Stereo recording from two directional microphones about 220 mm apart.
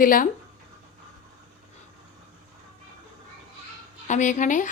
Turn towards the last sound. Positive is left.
turn(degrees=35)  # may be behind; listen again after turning